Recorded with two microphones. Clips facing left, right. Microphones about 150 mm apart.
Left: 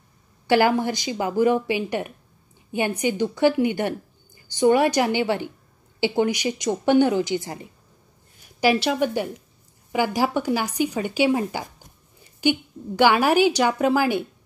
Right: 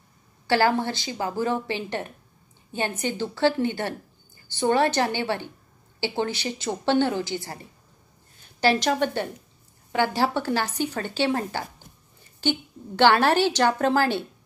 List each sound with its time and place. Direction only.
0.5 s a woman's voice: 15° left (ahead or behind)